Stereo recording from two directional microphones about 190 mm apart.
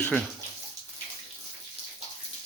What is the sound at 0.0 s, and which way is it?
Speech, 10° left (ahead or behind).